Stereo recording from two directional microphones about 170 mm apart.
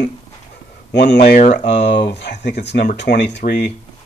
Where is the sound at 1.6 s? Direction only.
90° left.